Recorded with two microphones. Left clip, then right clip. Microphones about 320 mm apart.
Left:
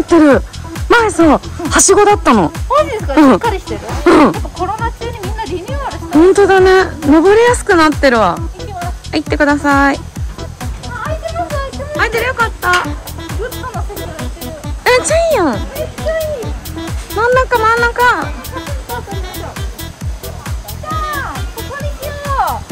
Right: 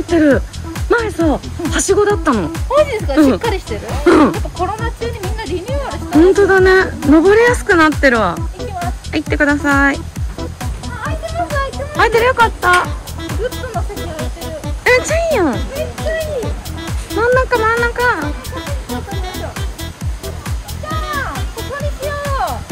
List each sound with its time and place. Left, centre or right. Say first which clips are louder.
0.8 s speech: left 6 dB; centre
8.5 s music: right 1 dB; centre
9.1 s speech: left 2 dB; centre
11.2 s music: right 3 dB; centre
14.8 s music: left 2 dB; centre
15.5 s speech: left 1 dB; centre
16.8 s music: left 1 dB; centre